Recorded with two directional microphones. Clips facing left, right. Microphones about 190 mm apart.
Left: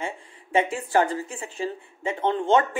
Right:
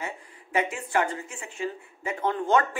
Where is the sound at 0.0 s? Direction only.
30° left (ahead or behind).